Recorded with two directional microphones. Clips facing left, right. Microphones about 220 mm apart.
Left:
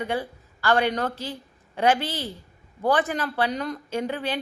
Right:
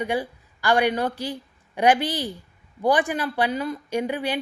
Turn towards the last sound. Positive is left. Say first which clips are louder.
# right 2 dB
turn(degrees=-15)  # may be behind; listen again after turning